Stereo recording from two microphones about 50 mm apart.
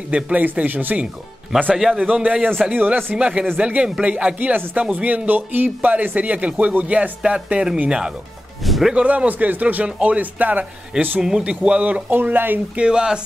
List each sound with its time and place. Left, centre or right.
0.1 s a man's voice: right
2.0 s a man's voice: right
2.7 s a man's voice: right
3.2 s a man's voice: right
7.2 s a man's voice: centre
8.6 s speech: centre
8.9 s a man's voice: right
11.1 s a man's voice: centre
12.1 s a man's voice: right
12.7 s speech: centre